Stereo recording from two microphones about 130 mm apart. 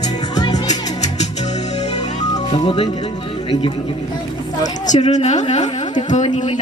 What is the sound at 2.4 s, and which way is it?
Music, 40° left (ahead or behind).